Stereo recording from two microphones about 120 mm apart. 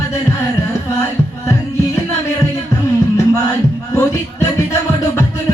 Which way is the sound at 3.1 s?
25° left (ahead or behind).